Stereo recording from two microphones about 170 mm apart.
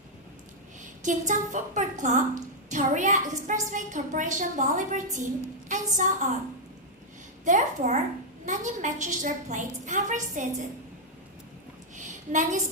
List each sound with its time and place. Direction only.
1.0 s a woman's voice: 45° right (ahead or behind)
7.4 s a woman's voice: 45° right (ahead or behind)
11.9 s a sound: 45° right (ahead or behind)